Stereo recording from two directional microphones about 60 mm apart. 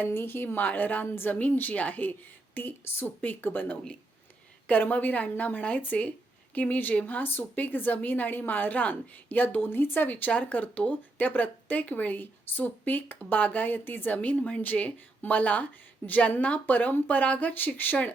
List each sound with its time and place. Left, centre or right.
0.0 s a woman's voice: left